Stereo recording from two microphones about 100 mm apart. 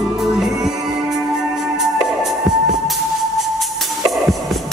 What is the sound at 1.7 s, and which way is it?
Music, 5° right (ahead or behind).